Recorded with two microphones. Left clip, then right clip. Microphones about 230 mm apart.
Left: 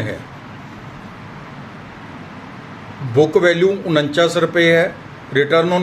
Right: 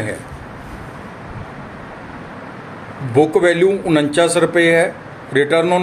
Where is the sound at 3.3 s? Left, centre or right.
Centre.